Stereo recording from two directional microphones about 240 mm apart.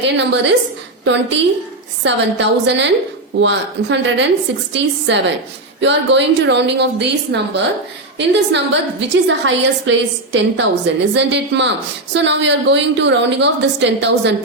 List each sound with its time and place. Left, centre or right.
0.0 s a woman's voice: right